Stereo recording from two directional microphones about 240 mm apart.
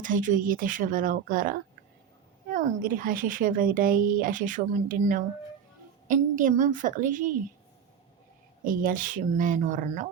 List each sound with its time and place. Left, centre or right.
0.0 s speech: right
8.6 s speech: right